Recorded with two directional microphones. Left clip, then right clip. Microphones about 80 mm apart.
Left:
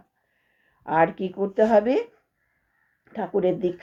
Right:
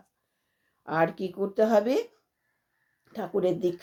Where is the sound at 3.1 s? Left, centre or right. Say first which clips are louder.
Left 4 dB; right.